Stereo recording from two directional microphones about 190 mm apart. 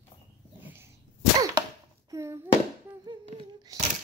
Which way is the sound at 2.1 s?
15° right (ahead or behind).